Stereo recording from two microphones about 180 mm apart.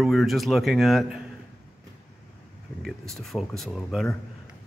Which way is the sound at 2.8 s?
Centre (ahead or behind).